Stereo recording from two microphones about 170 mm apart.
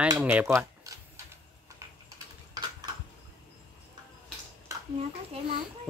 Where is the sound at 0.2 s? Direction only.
10° right (ahead or behind).